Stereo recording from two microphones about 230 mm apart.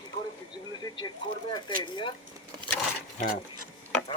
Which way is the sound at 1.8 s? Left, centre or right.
Left.